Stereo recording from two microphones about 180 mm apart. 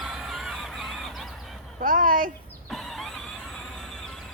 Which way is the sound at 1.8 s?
50° right (ahead or behind).